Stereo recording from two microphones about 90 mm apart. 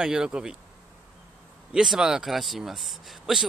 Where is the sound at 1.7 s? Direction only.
5° right (ahead or behind).